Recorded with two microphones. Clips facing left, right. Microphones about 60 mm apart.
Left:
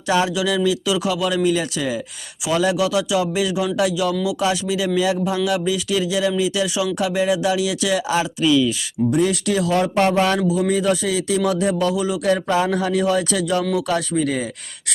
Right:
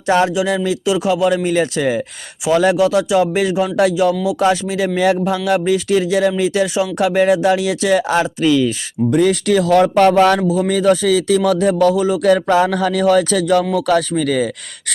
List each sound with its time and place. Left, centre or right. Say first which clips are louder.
0.3 s speech: right 2 dB; right
2.7 s speech: right 6 dB; right
9.1 s speech: right 6 dB; right
11.9 s speech: right 6 dB; right
12.2 s speech: right 6 dB; right
14.2 s speech: right 4 dB; right